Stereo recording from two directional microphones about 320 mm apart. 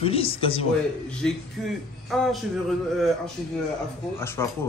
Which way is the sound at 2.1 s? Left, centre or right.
Centre.